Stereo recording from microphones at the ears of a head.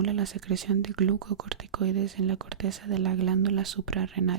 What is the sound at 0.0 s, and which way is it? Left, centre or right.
Speech, right.